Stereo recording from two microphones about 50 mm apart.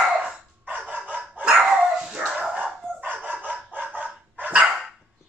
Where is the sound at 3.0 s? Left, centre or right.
Right.